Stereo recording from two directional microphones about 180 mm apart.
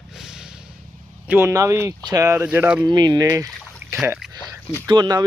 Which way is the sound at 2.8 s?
25° right (ahead or behind).